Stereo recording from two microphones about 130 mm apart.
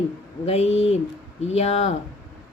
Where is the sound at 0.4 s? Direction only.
55° left (ahead or behind).